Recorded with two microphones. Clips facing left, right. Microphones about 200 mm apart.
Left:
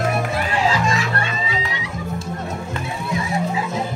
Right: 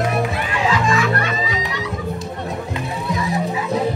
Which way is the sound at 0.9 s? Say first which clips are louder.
Right 4 dB; 30° left (ahead or behind).